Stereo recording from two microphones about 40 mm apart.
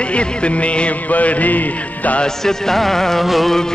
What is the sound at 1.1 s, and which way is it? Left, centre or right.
Mantra, left.